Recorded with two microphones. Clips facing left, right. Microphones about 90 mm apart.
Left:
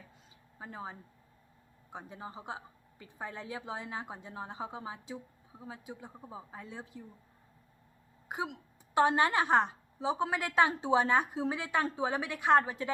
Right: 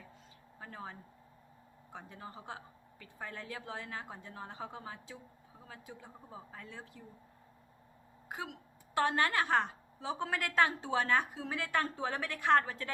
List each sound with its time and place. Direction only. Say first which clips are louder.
0.6 s a woman's voice: left 3 dB; 20° left (ahead or behind)
8.3 s a woman's voice: left 5 dB; 20° left (ahead or behind)